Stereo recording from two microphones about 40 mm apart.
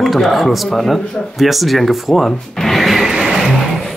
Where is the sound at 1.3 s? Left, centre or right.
Centre.